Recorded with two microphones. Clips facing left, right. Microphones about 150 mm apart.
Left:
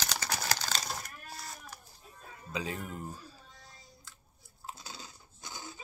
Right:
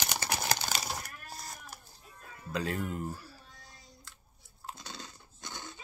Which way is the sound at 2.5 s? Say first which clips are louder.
Right 4 dB; centre (ahead or behind).